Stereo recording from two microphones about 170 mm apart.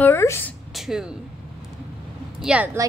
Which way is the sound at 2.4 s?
10° right (ahead or behind).